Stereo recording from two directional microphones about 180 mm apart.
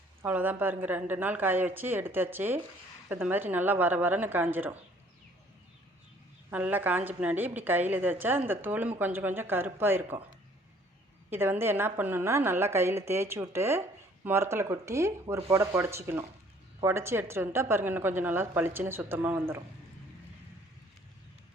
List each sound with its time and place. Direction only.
0.2 s a woman's voice: 10° right (ahead or behind)
6.5 s a woman's voice: 10° right (ahead or behind)
11.3 s a woman's voice: 15° right (ahead or behind)